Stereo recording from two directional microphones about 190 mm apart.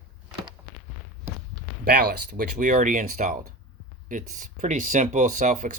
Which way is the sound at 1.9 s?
45° right (ahead or behind).